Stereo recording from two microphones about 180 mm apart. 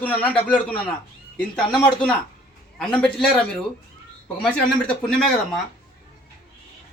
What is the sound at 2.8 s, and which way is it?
Speech, 5° left (ahead or behind).